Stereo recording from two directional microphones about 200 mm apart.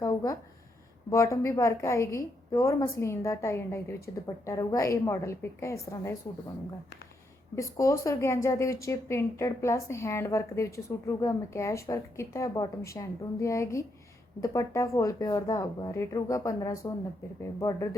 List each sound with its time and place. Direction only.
0.0 s a sound: 20° left (ahead or behind)
1.1 s speech: 15° left (ahead or behind)
7.5 s speech: 15° left (ahead or behind)